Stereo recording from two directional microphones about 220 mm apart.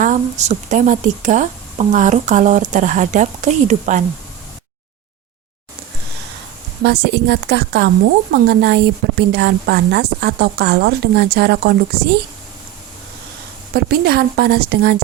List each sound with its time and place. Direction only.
0.0 s speech: 35° right (ahead or behind)
6.8 s a woman's voice: 50° right (ahead or behind)
13.7 s a woman's voice: 45° right (ahead or behind)